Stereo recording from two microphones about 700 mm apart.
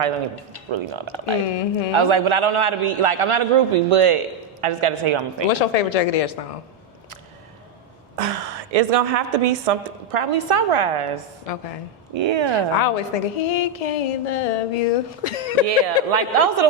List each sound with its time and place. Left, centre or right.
0.7 s speech: right
1.5 s speech: left
1.9 s a woman's voice: right
5.5 s speech: left
8.1 s a woman's voice: right
11.5 s speech: left
12.1 s speech: right
12.7 s speech: left
16.1 s speech: right